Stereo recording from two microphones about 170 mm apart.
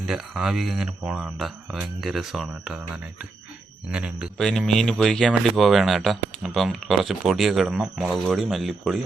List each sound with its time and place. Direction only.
0.1 s speech: 5° right (ahead or behind)